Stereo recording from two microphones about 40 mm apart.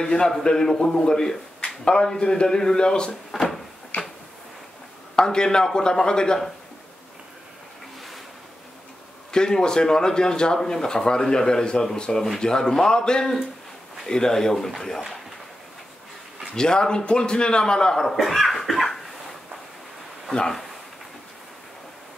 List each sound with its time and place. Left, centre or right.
0.0 s a man's voice: centre
3.3 s cupboard open or close: left
5.1 s a man's voice: centre
9.3 s speech: centre
16.5 s a man's voice: centre
18.1 s cough: centre